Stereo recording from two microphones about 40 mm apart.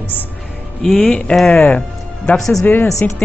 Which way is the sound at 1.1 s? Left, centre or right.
Centre.